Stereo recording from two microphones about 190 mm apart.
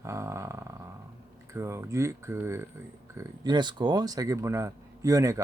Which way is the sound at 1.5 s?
15° right (ahead or behind).